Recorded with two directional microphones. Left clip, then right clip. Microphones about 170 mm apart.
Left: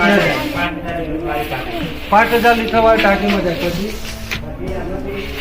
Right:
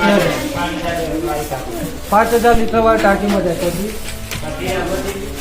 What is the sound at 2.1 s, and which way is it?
Speech, 15° right (ahead or behind).